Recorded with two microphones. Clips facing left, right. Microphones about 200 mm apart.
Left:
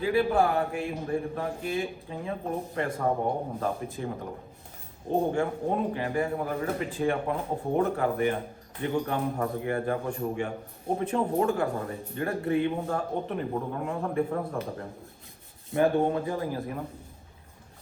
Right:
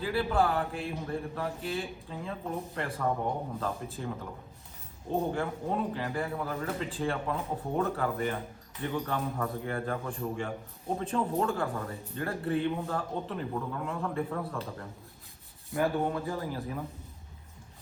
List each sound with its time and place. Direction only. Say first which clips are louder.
0.0 s a man's voice: left 4 dB; 15° left (ahead or behind)
3.0 s a man's voice: left 2 dB; 25° left (ahead or behind)
15.7 s a man's voice: left 5 dB; 25° left (ahead or behind)